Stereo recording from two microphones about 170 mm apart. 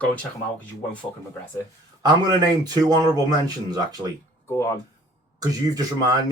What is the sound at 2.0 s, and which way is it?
Speech, 25° right (ahead or behind).